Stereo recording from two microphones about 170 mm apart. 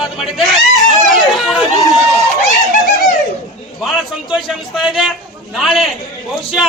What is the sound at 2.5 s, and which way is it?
Speech, 50° left (ahead or behind).